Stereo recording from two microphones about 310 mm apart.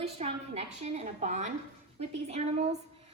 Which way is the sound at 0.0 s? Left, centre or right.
Right.